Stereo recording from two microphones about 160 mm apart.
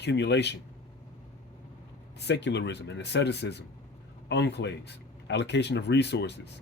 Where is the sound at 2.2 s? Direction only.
90° left.